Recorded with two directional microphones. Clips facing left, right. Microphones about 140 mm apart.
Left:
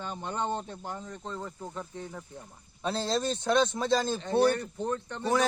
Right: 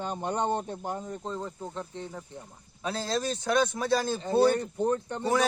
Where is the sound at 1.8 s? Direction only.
10° right (ahead or behind).